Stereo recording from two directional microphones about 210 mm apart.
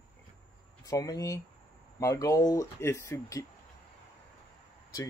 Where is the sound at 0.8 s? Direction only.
15° left (ahead or behind).